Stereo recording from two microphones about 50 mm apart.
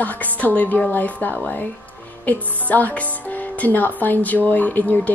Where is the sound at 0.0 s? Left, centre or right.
Left.